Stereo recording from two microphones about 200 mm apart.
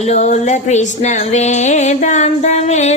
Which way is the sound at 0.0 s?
35° left (ahead or behind).